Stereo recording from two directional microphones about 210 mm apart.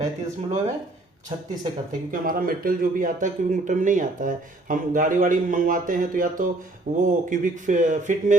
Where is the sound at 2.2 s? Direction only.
45° right (ahead or behind).